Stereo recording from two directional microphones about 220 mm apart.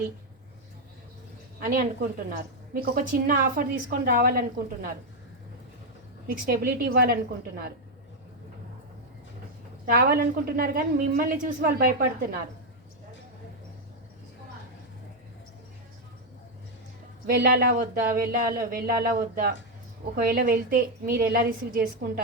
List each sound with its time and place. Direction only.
1.6 s speech: 40° right (ahead or behind)
6.2 s speech: 40° right (ahead or behind)
9.8 s a woman's voice: 40° right (ahead or behind)
17.2 s a woman's voice: 45° right (ahead or behind)